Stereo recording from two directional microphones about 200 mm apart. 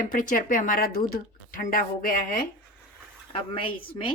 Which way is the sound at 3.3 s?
25° left (ahead or behind).